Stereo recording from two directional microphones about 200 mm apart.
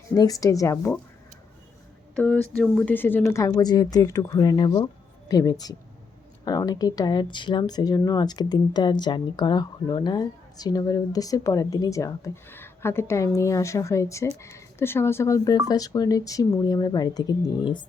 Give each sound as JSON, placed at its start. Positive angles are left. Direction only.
{"t": 0.1, "sound": "speech", "side_deg": 15}
{"t": 2.1, "sound": "speech", "side_deg": 5}